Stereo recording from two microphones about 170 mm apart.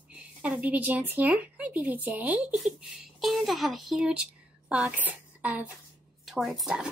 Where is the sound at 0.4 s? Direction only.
10° right (ahead or behind).